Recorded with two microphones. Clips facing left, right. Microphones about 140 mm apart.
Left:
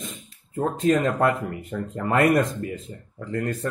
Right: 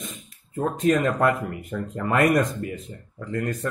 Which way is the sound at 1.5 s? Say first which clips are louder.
Even; 30° left (ahead or behind).